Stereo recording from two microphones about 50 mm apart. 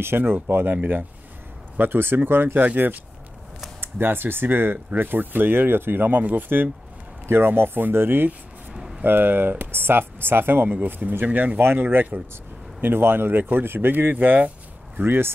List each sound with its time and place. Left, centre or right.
0.0 s speech: right
1.8 s speech: right
3.8 s speech: right
7.2 s speech: right
8.7 s a sound: centre
9.0 s speech: right
11.2 s speech: right
11.6 s speech: right
15.0 s speech: right